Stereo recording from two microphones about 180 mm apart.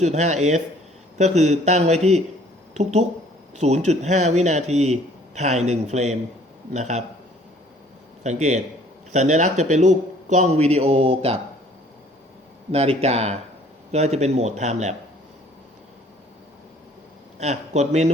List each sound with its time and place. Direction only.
0.0 s a man's voice: 40° right (ahead or behind)
8.2 s a man's voice: 40° right (ahead or behind)
12.7 s a man's voice: 35° right (ahead or behind)
17.4 s a man's voice: 40° right (ahead or behind)